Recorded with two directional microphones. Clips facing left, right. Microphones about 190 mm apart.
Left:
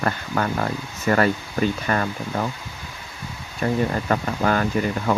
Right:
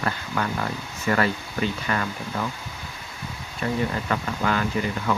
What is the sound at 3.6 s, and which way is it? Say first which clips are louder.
Speech: left 4 dB; 40° left (ahead or behind).